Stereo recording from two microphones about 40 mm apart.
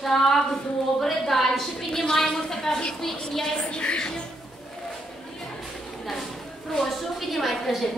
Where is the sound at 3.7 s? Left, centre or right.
Left.